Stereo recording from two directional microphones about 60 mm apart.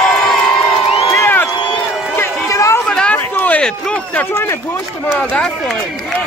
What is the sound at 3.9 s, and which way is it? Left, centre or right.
Speech, left.